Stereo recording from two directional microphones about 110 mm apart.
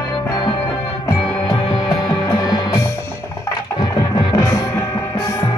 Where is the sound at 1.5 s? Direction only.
40° left (ahead or behind).